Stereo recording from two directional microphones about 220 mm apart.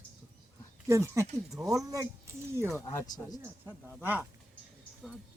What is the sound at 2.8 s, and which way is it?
Speech, 15° left (ahead or behind).